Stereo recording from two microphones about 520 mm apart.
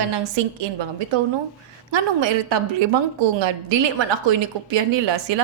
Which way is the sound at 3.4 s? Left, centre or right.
Right.